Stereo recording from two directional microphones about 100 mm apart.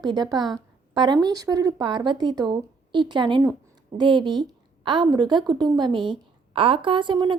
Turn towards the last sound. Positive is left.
turn(degrees=-50)  # may be behind; listen again after turning